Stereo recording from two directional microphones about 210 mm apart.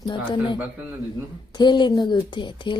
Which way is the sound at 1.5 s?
20° left (ahead or behind).